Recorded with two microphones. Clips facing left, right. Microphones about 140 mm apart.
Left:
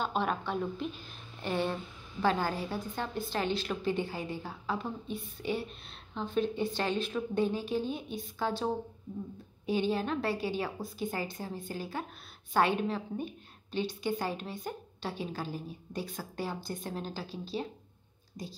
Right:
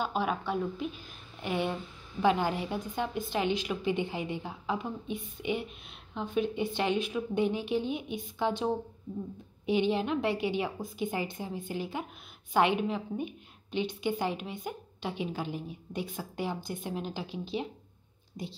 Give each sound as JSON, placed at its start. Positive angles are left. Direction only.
{"t": 0.0, "sound": "a woman's voice", "side_deg": -5}
{"t": 9.7, "sound": "a woman's voice", "side_deg": -20}